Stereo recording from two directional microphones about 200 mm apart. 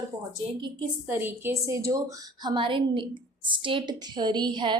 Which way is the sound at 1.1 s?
10° right (ahead or behind).